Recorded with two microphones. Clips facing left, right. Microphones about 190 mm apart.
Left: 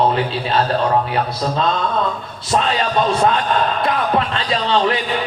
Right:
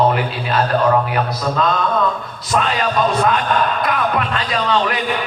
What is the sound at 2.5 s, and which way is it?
A man's voice, 30° left (ahead or behind).